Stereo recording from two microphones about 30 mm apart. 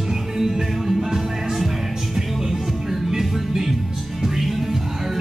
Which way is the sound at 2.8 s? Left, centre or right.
Centre.